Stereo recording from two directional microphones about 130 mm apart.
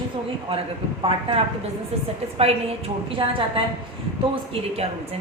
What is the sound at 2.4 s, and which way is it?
A woman's voice, 45° right (ahead or behind).